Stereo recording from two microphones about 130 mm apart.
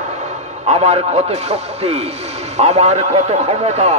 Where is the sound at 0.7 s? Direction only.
55° right (ahead or behind).